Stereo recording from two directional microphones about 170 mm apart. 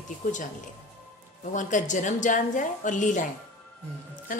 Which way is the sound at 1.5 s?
45° left (ahead or behind).